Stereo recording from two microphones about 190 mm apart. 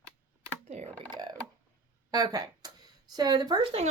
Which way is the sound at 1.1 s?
20° right (ahead or behind).